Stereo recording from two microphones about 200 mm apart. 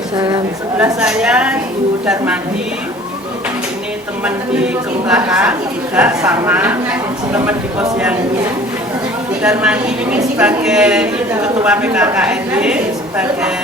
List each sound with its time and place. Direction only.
0.2 s a woman's voice: 20° right (ahead or behind)
0.9 s a woman's voice: 5° right (ahead or behind)
4.2 s a woman's voice: 5° right (ahead or behind)
9.4 s a woman's voice: 5° right (ahead or behind)